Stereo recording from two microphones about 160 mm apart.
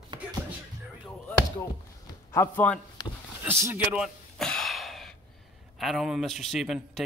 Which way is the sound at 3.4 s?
15° right (ahead or behind).